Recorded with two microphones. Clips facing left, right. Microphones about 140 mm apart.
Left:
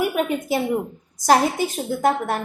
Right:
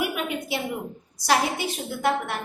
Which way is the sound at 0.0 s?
40° left (ahead or behind).